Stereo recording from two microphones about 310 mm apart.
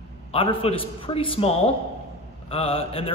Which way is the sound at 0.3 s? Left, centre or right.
Centre.